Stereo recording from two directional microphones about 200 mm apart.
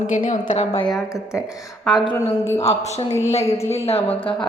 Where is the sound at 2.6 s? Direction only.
30° left (ahead or behind).